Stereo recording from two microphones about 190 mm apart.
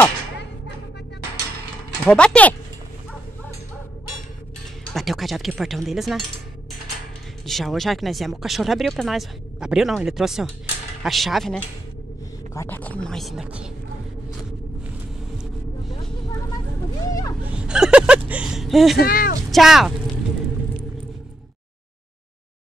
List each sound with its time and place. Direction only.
2.0 s speech: 5° left (ahead or behind)
4.9 s speech: centre (ahead or behind)
7.4 s speech: centre (ahead or behind)
17.0 s a sound: 20° left (ahead or behind)
17.5 s a sound: 5° right (ahead or behind)
18.9 s speech: 50° left (ahead or behind)
19.5 s speech: centre (ahead or behind)